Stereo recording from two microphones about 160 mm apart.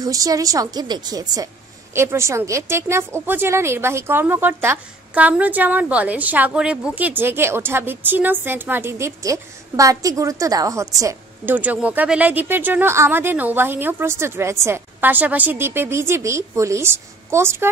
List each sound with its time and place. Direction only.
0.0 s a woman's voice: 20° right (ahead or behind)